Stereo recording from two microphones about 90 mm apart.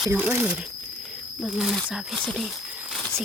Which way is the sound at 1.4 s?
5° right (ahead or behind).